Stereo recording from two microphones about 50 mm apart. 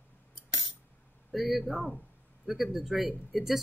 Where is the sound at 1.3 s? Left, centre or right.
Centre.